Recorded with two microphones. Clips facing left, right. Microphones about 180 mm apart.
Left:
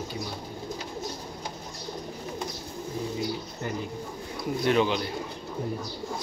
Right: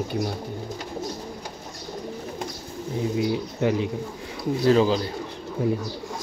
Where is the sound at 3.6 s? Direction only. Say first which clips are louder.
Right 12 dB; 90° right.